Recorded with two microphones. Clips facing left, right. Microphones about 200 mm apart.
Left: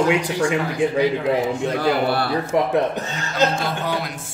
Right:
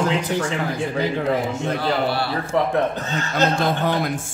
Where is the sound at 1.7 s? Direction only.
50° left (ahead or behind).